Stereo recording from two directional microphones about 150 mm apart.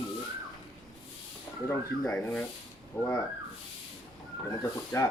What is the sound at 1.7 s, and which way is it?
Speech, 5° left (ahead or behind).